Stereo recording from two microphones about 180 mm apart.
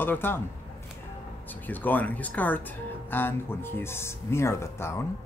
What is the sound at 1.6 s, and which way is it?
Speech, 10° left (ahead or behind).